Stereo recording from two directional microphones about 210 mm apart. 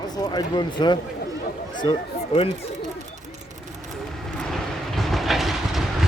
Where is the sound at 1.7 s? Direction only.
20° left (ahead or behind).